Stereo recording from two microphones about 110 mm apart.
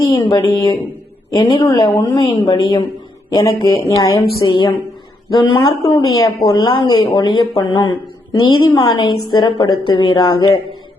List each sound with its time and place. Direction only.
0.0 s a man's voice: 35° left (ahead or behind)
4.4 s a woman's voice: 45° left (ahead or behind)
5.3 s a woman's voice: 35° left (ahead or behind)